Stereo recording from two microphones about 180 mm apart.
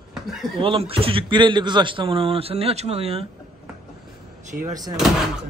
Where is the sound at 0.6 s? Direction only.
30° right (ahead or behind).